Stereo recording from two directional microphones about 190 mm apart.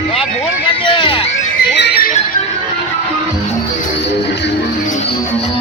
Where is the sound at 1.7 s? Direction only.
60° left (ahead or behind).